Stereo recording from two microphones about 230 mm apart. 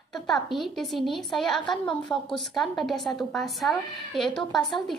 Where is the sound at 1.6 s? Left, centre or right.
Left.